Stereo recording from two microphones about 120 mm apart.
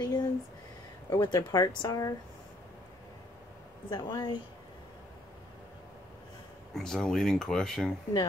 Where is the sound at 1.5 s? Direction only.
30° left (ahead or behind).